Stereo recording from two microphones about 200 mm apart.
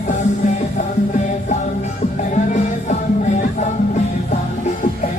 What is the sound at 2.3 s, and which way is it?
Music, 35° left (ahead or behind).